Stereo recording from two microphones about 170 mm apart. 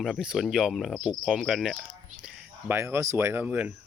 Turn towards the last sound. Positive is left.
turn(degrees=-10)  # may be behind; listen again after turning